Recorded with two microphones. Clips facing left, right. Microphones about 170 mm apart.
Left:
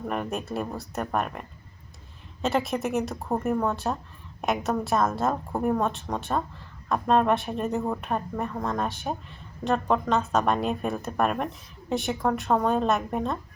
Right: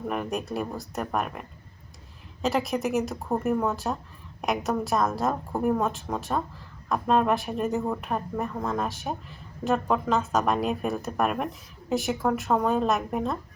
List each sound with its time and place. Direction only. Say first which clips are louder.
0.1 s speech: even; centre (ahead or behind)